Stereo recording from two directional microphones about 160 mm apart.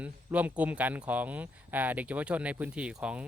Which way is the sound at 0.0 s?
10° right (ahead or behind).